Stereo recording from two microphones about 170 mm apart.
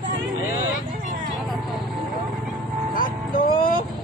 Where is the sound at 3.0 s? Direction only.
55° left (ahead or behind).